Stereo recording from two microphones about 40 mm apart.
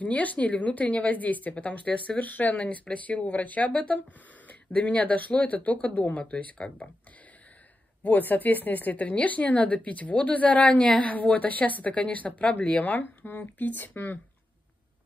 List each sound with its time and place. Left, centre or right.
0.0 s a woman's voice: left
8.0 s a woman's voice: left
10.7 s a woman's voice: left
11.0 s a woman's voice: left
13.0 s speech: left